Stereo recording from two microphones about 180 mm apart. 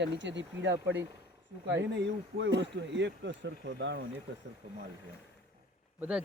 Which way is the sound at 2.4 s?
75° right (ahead or behind).